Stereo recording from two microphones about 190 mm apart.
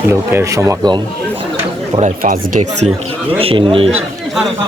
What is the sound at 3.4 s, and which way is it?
Speech, 30° right (ahead or behind).